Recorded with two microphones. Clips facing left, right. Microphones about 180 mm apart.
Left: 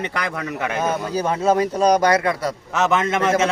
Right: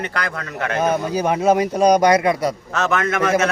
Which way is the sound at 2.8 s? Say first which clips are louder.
Left 2 dB; 20° left (ahead or behind).